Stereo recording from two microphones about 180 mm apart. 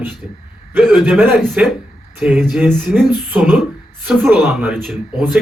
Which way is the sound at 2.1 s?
10° right (ahead or behind).